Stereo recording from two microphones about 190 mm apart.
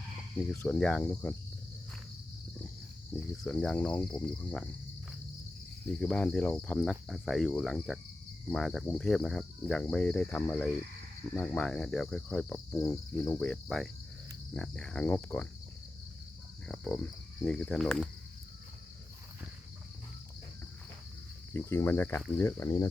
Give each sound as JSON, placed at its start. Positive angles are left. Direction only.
{"t": 0.3, "sound": "cricket", "side_deg": 10}
{"t": 3.4, "sound": "cricket", "side_deg": 5}
{"t": 6.0, "sound": "cricket", "side_deg": 5}
{"t": 12.7, "sound": "cricket", "side_deg": 15}
{"t": 16.6, "sound": "cricket", "side_deg": 5}
{"t": 21.7, "sound": "cricket", "side_deg": 15}